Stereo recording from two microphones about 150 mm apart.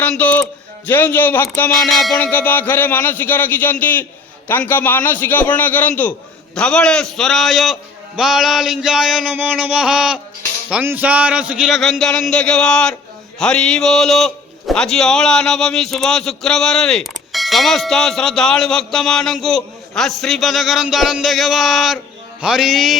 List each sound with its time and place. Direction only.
0.0 s a sound: 10° left (ahead or behind)
0.9 s a man's voice: 10° left (ahead or behind)
1.9 s a man's voice: centre (ahead or behind)
2.1 s a man's voice: 10° left (ahead or behind)